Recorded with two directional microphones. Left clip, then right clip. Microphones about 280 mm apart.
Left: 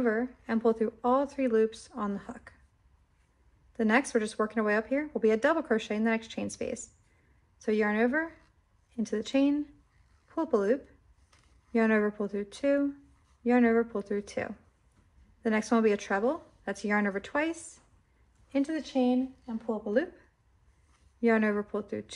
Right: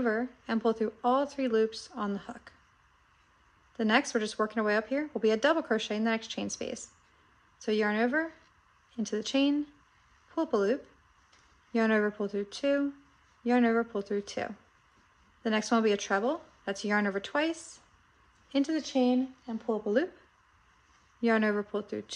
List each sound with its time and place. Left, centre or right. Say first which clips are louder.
0.0 s speech: left 1 dB; centre
3.7 s speech: left 1 dB; centre
7.6 s speech: left 1 dB; centre
21.2 s speech: left 1 dB; centre